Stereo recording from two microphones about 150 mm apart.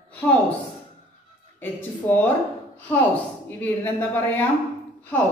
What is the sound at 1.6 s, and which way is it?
Speech, 10° left (ahead or behind).